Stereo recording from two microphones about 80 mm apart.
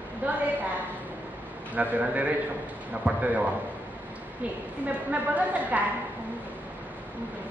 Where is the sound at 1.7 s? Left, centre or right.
Centre.